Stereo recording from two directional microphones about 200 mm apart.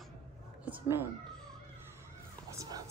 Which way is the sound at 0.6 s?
10° right (ahead or behind).